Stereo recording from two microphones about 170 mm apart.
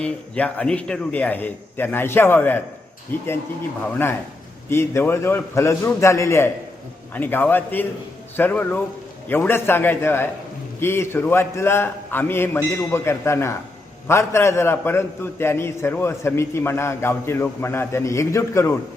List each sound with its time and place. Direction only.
0.0 s a man's voice: 5° left (ahead or behind)
4.7 s a man's voice: 15° left (ahead or behind)